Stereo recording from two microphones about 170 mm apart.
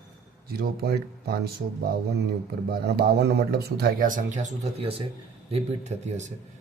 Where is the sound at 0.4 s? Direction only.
65° right (ahead or behind).